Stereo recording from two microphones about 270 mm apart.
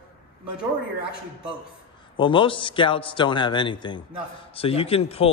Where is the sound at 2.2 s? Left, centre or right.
Centre.